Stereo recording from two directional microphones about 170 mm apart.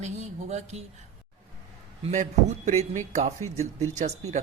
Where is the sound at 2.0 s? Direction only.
40° right (ahead or behind).